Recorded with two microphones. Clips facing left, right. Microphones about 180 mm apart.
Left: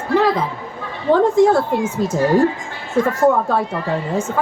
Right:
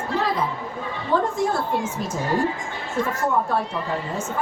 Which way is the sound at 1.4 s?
90° left.